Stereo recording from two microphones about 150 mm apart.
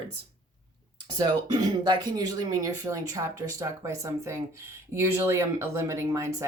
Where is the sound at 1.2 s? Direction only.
30° right (ahead or behind).